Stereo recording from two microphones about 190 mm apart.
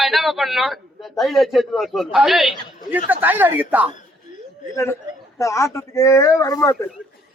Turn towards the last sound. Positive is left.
turn(degrees=15)  # may be behind; listen again after turning